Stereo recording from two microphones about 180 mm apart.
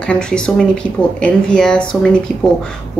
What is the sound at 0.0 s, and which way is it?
Speech, 5° left (ahead or behind).